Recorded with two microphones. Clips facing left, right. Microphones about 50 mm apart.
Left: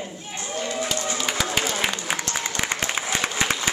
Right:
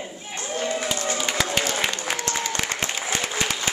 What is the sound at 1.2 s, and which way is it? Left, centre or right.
Speech, centre.